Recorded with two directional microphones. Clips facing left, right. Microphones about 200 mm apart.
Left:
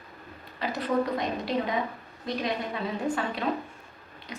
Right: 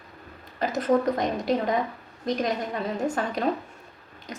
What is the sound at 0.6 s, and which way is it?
Speech, 45° right (ahead or behind).